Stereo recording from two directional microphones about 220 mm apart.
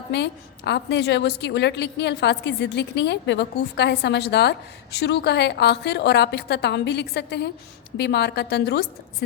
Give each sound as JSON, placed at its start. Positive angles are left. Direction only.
{"t": 0.1, "sound": "a woman's voice", "side_deg": 50}